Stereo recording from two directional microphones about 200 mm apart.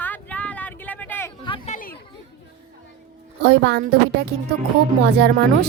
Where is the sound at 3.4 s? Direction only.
60° right (ahead or behind).